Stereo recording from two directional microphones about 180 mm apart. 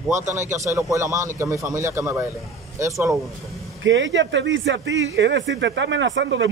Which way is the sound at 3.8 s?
90° right.